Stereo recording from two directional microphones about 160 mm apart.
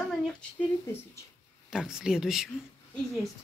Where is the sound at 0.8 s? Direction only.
15° left (ahead or behind).